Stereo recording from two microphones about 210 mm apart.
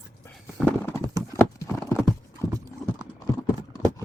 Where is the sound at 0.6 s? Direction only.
10° left (ahead or behind).